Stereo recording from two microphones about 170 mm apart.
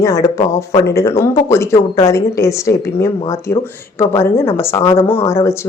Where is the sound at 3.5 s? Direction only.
70° left (ahead or behind).